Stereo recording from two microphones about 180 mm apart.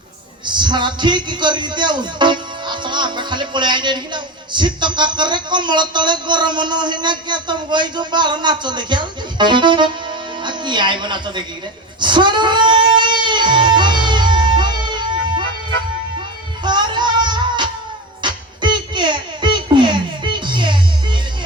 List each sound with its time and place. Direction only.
0.4 s a man's voice: 25° right (ahead or behind)
11.9 s music: 25° right (ahead or behind)
16.6 s music: 25° right (ahead or behind)